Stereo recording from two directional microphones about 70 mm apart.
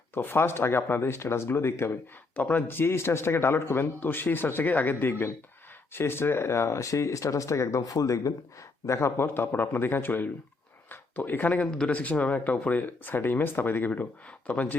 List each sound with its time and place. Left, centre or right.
0.1 s speech: left
2.3 s speech: left
8.9 s speech: left